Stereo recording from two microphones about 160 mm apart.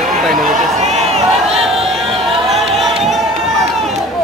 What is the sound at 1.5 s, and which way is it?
Crowd, 40° right (ahead or behind).